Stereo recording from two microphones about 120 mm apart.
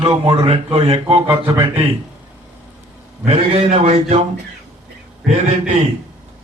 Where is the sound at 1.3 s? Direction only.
20° right (ahead or behind).